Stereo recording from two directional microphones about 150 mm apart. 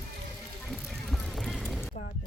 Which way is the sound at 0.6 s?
Centre (ahead or behind).